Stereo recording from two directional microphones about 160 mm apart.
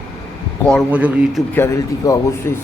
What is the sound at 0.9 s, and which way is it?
Speech, 10° right (ahead or behind).